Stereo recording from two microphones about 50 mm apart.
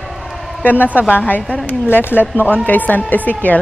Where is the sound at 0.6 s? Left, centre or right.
Left.